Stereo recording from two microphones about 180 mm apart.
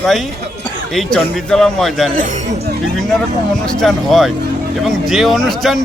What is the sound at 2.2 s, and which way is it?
Speech, 40° right (ahead or behind).